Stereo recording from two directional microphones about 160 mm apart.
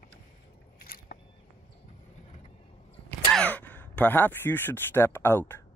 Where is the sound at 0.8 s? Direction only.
70° left (ahead or behind).